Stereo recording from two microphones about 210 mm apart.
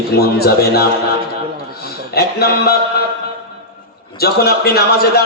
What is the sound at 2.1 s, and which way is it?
Speech, 50° left (ahead or behind).